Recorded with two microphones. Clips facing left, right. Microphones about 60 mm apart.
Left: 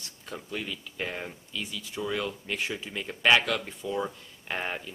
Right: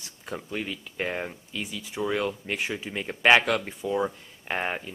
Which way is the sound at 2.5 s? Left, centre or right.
Centre.